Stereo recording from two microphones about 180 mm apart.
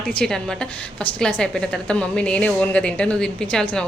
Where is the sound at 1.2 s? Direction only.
5° left (ahead or behind).